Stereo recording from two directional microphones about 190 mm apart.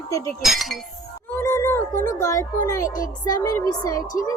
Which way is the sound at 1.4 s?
15° left (ahead or behind).